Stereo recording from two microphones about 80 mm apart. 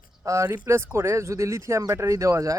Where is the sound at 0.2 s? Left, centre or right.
Right.